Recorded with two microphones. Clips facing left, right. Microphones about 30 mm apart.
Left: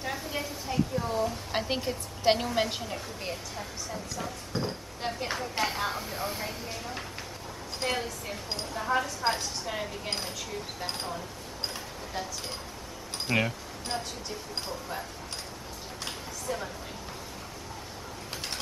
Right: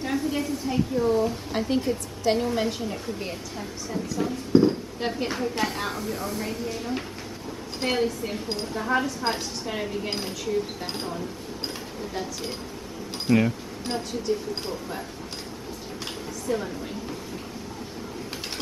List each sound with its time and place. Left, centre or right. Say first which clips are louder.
0.0 s a sound: right 7 dB; centre
0.9 s speech: right 10 dB; centre
1.5 s speech: right 6 dB; left
2.6 s speech: right 4 dB; centre
5.3 s speech: right 3 dB; centre
7.8 s speech: right 7 dB; centre
13.3 s speech: right 6 dB; centre
13.8 s speech: right 8 dB; centre
16.4 s speech: right 7 dB; centre